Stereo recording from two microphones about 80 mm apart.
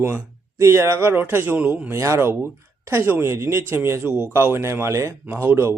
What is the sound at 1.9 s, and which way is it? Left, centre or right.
A man's voice, right.